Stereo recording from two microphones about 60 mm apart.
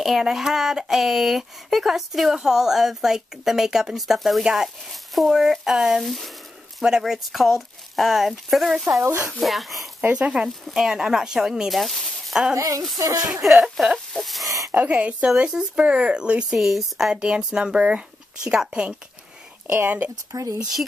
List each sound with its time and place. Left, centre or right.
0.0 s speech: centre
10.1 s speech: centre
12.5 s speech: right
12.9 s speech: right
13.3 s speech: centre
14.7 s speech: right
16.5 s speech: centre
17.1 s speech: centre
20.3 s speech: right